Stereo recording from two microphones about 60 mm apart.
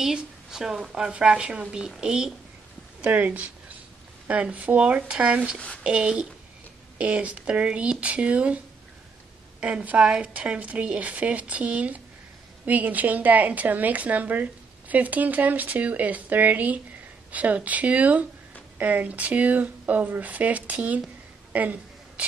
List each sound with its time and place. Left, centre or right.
0.0 s a woman's voice: centre
3.0 s a woman's voice: right
9.6 s speech: right
21.5 s a sound: right